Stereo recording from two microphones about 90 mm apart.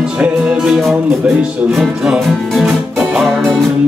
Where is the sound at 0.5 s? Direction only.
Centre (ahead or behind).